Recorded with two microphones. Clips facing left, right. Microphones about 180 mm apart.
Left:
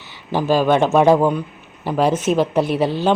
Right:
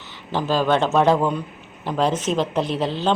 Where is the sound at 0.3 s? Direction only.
10° left (ahead or behind).